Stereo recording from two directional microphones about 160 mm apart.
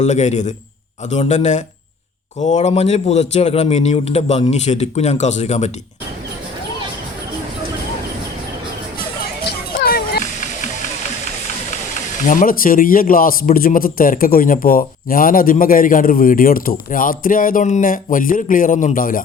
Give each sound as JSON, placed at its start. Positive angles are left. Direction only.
{"t": 0.0, "sound": "a man's voice", "side_deg": 45}
{"t": 9.5, "sound": "a sound", "side_deg": 75}
{"t": 12.3, "sound": "a man's voice", "side_deg": 60}